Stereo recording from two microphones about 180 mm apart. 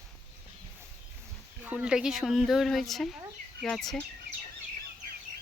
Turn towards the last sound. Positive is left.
turn(degrees=0)  # may be behind; listen again after turning